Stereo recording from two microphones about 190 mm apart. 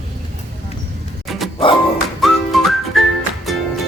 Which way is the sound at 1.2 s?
Centre (ahead or behind).